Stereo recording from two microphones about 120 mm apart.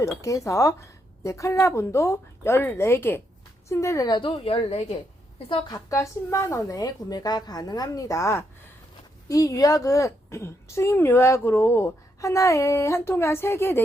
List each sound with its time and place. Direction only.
0.2 s a woman's voice: 25° left (ahead or behind)
4.1 s a woman's voice: 40° left (ahead or behind)
5.5 s a woman's voice: 40° left (ahead or behind)
5.9 s a woman's voice: 25° left (ahead or behind)